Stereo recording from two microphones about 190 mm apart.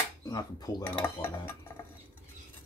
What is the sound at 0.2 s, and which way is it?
Speech, 20° left (ahead or behind).